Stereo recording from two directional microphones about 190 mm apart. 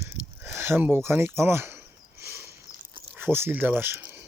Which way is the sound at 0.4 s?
10° right (ahead or behind).